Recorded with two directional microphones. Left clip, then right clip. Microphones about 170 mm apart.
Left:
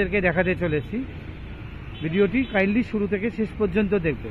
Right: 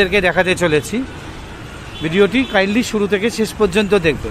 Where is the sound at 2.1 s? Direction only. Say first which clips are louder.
Right 8 dB; 20° right (ahead or behind).